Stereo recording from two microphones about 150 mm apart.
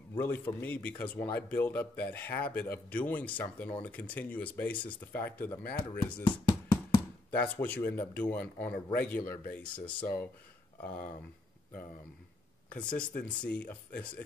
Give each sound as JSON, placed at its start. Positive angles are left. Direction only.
{"t": 0.2, "sound": "speech", "side_deg": 15}
{"t": 6.2, "sound": "a sound", "side_deg": 30}
{"t": 7.2, "sound": "speech", "side_deg": 10}
{"t": 12.6, "sound": "speech", "side_deg": 10}